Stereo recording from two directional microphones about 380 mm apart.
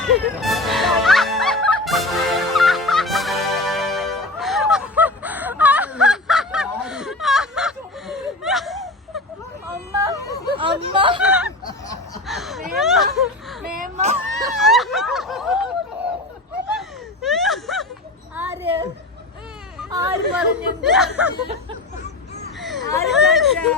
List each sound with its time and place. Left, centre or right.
0.0 s music: centre
9.9 s yodeling: centre
10.6 s chatter: centre
11.2 s a sound: centre
13.1 s whimper: centre
13.7 s a sound: right
14.5 s fowl: centre
17.2 s gasp: centre
18.3 s a sound: centre
19.8 s hubbub: centre
20.3 s a sound: centre
22.9 s chatter: centre